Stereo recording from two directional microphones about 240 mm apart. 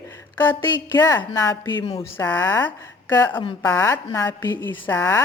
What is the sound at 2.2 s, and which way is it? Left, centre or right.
A woman's voice, centre.